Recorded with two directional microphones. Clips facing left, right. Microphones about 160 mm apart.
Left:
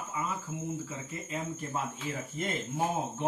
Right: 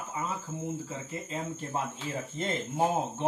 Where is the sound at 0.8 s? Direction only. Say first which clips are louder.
Right 2 dB; 30° right (ahead or behind).